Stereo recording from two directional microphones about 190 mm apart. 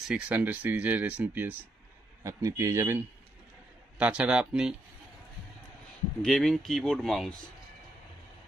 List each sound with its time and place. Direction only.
0.1 s speech: 10° right (ahead or behind)
4.0 s speech: 5° right (ahead or behind)
6.2 s speech: centre (ahead or behind)